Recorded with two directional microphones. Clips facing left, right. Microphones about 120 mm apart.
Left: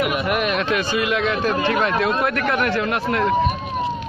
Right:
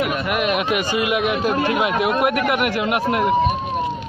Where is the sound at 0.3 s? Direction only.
5° right (ahead or behind).